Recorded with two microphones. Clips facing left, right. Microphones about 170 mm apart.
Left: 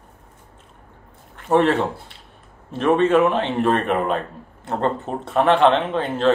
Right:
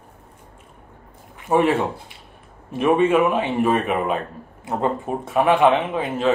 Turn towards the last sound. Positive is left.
turn(degrees=-5)  # may be behind; listen again after turning